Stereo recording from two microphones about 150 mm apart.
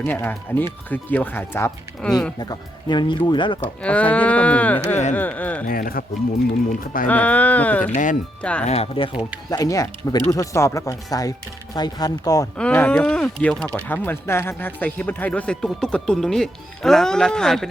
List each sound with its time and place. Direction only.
0.0 s speech: 15° left (ahead or behind)
2.4 s speech: 30° left (ahead or behind)
3.6 s speech: 10° left (ahead or behind)
5.6 s speech: 70° left (ahead or behind)
6.7 s speech: 65° left (ahead or behind)
7.1 s speech: 10° left (ahead or behind)
8.6 s speech: 45° left (ahead or behind)
9.5 s speech: 25° left (ahead or behind)
12.5 s speech: 10° left (ahead or behind)